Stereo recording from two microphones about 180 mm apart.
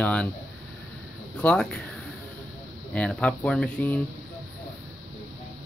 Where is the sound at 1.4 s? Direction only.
5° left (ahead or behind).